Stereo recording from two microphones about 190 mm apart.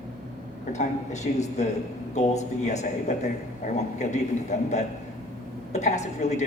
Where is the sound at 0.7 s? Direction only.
35° left (ahead or behind).